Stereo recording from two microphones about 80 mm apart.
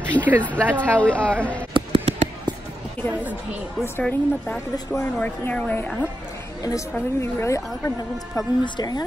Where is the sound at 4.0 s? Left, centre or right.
Centre.